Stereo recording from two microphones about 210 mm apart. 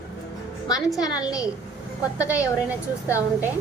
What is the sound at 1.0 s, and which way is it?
Speech, 20° left (ahead or behind).